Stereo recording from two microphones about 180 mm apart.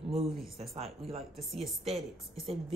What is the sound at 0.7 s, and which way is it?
Speech, 35° right (ahead or behind).